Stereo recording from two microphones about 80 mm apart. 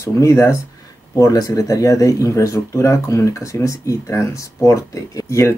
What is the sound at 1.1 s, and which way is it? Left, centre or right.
Speech, left.